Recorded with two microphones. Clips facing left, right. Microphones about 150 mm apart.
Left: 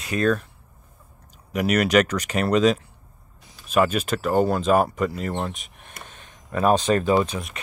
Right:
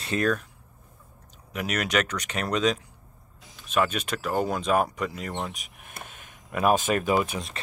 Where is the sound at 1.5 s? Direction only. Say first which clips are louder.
Left 8 dB; 5° left (ahead or behind); by 7.1 s 10° right (ahead or behind).